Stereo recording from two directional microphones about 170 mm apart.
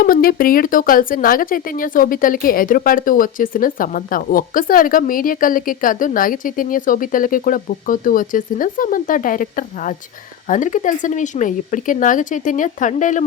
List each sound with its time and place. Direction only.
0.0 s speech: 60° left (ahead or behind)